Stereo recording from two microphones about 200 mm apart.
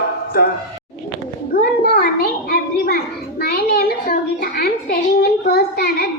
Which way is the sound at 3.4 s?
50° left (ahead or behind).